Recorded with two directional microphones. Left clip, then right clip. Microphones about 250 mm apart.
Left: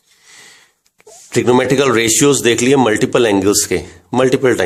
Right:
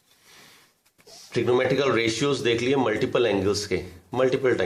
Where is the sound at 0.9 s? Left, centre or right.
Left.